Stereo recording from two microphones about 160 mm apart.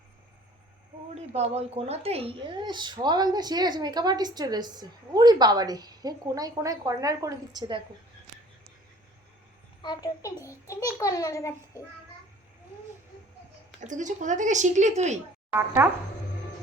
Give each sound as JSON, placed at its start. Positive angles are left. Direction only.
{"t": 1.1, "sound": "speech", "side_deg": -40}
{"t": 9.8, "sound": "a child's voice", "side_deg": 25}
{"t": 13.8, "sound": "speech", "side_deg": -50}
{"t": 15.5, "sound": "speech", "side_deg": -15}